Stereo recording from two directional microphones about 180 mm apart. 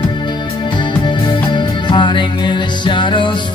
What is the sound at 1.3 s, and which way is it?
Music, 25° left (ahead or behind).